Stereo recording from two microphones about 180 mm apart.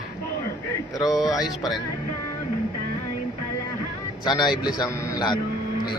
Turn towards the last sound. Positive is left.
turn(degrees=25)  # may be behind; listen again after turning